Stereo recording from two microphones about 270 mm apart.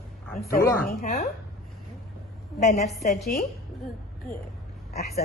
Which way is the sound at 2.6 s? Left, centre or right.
Left.